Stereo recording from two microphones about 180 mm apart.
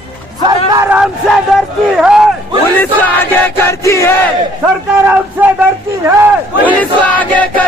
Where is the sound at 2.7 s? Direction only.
10° left (ahead or behind).